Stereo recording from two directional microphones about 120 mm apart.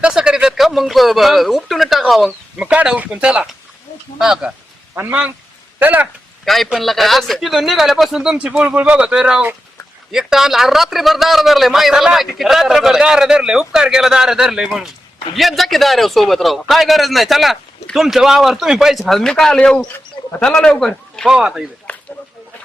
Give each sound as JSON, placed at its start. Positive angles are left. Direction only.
{"t": 0.0, "sound": "a man's voice", "side_deg": -10}
{"t": 4.9, "sound": "speech", "side_deg": -15}
{"t": 6.4, "sound": "a man's voice", "side_deg": 0}
{"t": 21.9, "sound": "a sound", "side_deg": 10}